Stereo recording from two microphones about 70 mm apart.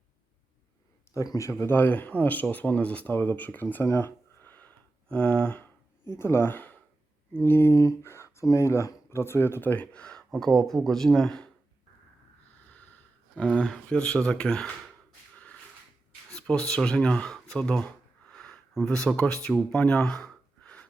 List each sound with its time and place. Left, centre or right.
1.1 s speech: left
3.9 s a sound: left
6.1 s speech: left; by 11.4 s centre
12.7 s sniff: left
13.3 s speech: centre
16.3 s speech: centre
19.7 s a sound: centre